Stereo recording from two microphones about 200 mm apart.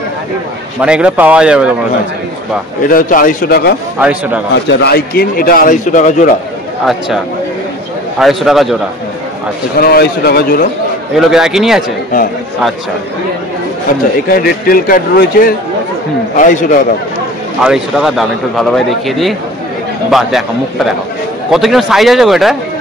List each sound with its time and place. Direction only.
0.7 s a man's voice: 5° right (ahead or behind)
2.9 s a man's voice: 45° left (ahead or behind)
4.0 s a man's voice: 5° right (ahead or behind)
4.6 s a man's voice: 60° left (ahead or behind); by 6.3 s 40° left (ahead or behind)
8.2 s a man's voice: centre (ahead or behind)
9.8 s a man's voice: 50° left (ahead or behind)
11.1 s a man's voice: centre (ahead or behind)
14.3 s a man's voice: 45° left (ahead or behind)
17.6 s a man's voice: centre (ahead or behind)